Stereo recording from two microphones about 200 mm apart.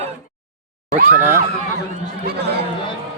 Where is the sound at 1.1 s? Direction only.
10° right (ahead or behind).